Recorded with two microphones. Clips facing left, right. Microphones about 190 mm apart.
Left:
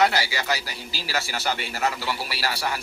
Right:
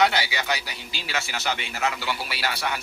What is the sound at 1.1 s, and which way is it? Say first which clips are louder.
Speech: left 1 dB; 35° left (ahead or behind).